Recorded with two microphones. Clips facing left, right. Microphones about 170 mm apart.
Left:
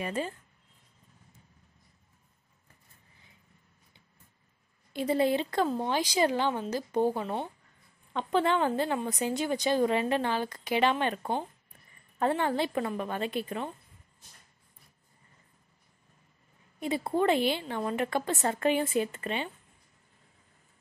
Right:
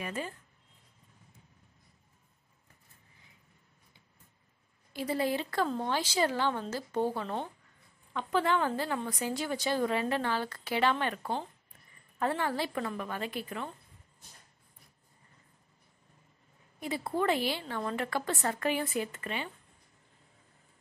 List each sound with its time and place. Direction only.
0.0 s speech: 30° left (ahead or behind)
4.9 s a woman's voice: 25° left (ahead or behind)
8.1 s a woman's voice: 25° left (ahead or behind)
16.8 s a woman's voice: 25° left (ahead or behind)